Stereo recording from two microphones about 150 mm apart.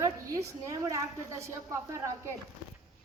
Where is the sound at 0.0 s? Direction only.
20° right (ahead or behind).